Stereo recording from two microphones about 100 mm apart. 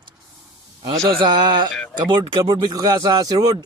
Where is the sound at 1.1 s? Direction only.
55° right (ahead or behind).